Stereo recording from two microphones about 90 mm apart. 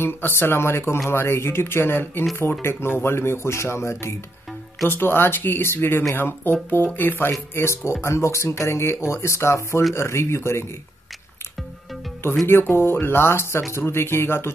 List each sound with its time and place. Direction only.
0.0 s speech: 25° left (ahead or behind)
12.4 s speech: 25° left (ahead or behind)